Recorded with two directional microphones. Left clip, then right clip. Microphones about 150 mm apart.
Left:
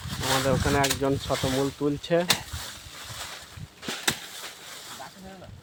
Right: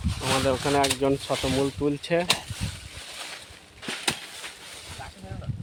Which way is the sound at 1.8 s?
10° right (ahead or behind).